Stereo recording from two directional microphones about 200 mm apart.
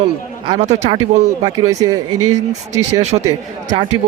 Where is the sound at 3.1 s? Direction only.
35° right (ahead or behind).